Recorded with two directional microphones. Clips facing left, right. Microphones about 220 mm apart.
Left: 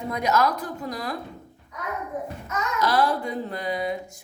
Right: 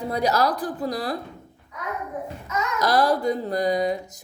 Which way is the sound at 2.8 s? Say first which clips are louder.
Right 3 dB; 40° right (ahead or behind).